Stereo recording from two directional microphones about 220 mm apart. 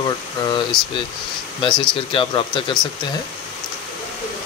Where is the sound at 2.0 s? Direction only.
25° left (ahead or behind).